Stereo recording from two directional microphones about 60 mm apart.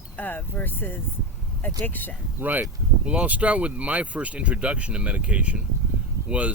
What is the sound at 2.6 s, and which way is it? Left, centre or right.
Speech, centre.